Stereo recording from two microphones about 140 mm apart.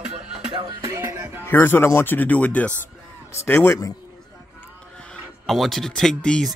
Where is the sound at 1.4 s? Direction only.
15° left (ahead or behind).